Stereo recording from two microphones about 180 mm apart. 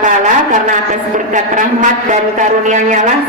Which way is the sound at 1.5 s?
45° right (ahead or behind).